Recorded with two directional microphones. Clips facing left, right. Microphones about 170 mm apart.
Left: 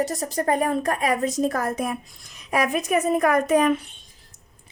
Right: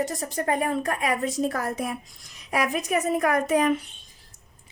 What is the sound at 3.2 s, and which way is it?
Speech, 55° left (ahead or behind).